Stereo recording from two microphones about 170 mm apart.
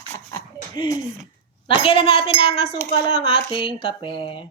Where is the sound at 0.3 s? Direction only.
25° left (ahead or behind).